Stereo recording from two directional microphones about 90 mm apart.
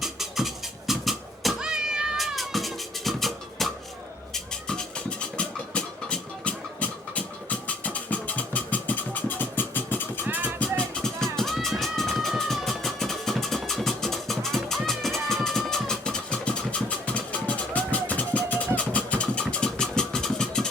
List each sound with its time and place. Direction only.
0.0 s cat: 5° right (ahead or behind)
4.4 s music: 10° left (ahead or behind)
10.2 s music: 20° right (ahead or behind)
10.6 s music: 10° left (ahead or behind)
18.8 s vehicle: 15° left (ahead or behind)